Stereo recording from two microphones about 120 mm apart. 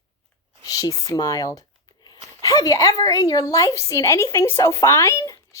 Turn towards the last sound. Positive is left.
turn(degrees=25)  # may be behind; listen again after turning